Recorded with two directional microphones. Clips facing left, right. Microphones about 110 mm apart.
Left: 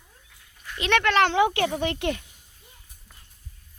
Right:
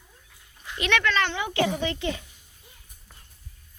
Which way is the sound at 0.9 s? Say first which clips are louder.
Left 5 dB; 65° left (ahead or behind).